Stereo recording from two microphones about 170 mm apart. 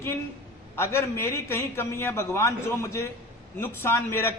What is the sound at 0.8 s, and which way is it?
A man's voice, 15° left (ahead or behind).